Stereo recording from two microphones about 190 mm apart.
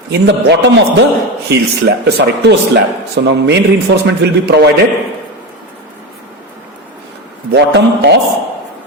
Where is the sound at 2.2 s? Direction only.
65° right (ahead or behind).